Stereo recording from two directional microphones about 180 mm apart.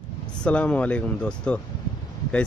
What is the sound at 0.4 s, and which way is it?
Speech, 5° left (ahead or behind).